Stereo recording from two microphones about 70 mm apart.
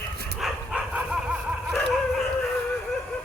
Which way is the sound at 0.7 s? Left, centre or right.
Centre.